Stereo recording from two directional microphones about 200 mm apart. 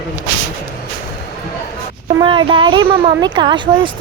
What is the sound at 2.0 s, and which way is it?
Speech, 25° right (ahead or behind).